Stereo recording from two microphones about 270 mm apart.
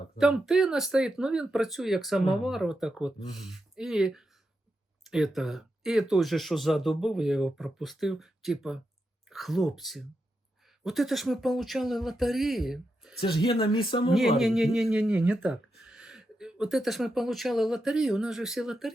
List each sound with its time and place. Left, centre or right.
0.2 s speech: centre
13.2 s speech: centre
14.3 s speech: centre